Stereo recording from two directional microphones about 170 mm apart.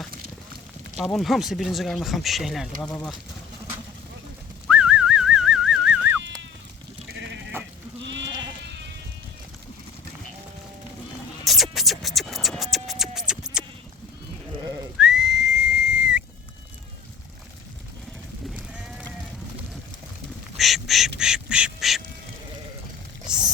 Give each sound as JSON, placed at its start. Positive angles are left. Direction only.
{"t": 0.9, "sound": "speech", "side_deg": 0}
{"t": 4.7, "sound": "dog", "side_deg": -5}
{"t": 7.1, "sound": "sheep", "side_deg": -90}
{"t": 11.4, "sound": "music", "side_deg": 0}
{"t": 12.7, "sound": "scratch", "side_deg": 0}
{"t": 14.9, "sound": "whistle", "side_deg": -5}
{"t": 18.5, "sound": "sheep", "side_deg": -5}
{"t": 20.6, "sound": "duck", "side_deg": 0}
{"t": 23.2, "sound": "a sound", "side_deg": -5}